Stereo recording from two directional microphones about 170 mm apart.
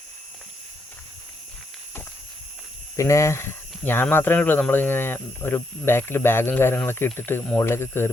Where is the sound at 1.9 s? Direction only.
10° left (ahead or behind).